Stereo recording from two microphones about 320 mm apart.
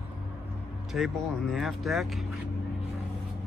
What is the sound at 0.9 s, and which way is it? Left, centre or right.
Speech, centre.